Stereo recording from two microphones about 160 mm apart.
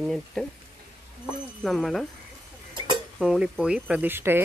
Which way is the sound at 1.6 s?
Centre (ahead or behind).